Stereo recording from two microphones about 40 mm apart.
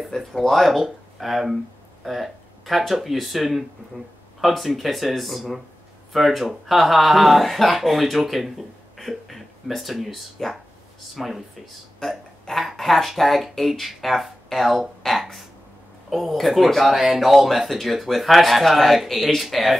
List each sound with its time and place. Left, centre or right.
0.1 s speech: centre
0.5 s speech: centre